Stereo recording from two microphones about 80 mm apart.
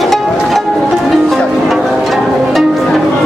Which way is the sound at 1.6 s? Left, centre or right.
Centre.